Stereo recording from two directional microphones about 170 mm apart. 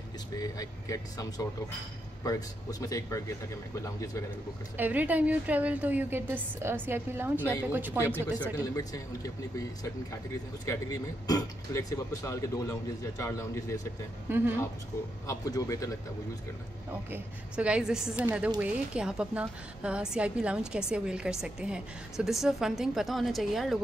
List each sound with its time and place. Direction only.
0.4 s speech: 20° left (ahead or behind)
2.2 s speech: 20° left (ahead or behind)
4.7 s a woman's voice: 10° right (ahead or behind)
8.5 s speech: 20° left (ahead or behind)
10.7 s speech: 20° left (ahead or behind)
14.3 s a woman's voice: 15° right (ahead or behind)
15.2 s speech: 20° left (ahead or behind)
17.1 s a woman's voice: 5° right (ahead or behind)